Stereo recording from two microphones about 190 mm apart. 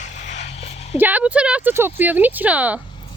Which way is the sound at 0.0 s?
35° left (ahead or behind).